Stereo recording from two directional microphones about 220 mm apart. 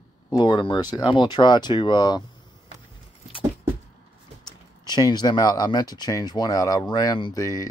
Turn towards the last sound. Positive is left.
turn(degrees=15)  # may be behind; listen again after turning